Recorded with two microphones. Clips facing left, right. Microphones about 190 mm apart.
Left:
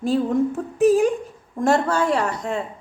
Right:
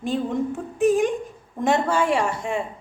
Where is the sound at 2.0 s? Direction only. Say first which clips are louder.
Left 1 dB; 10° right (ahead or behind).